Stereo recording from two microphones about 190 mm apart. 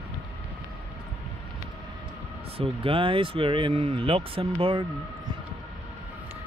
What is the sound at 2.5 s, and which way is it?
Speech, 30° right (ahead or behind).